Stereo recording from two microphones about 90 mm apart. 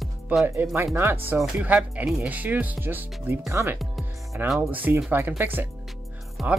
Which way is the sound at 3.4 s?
35° right (ahead or behind).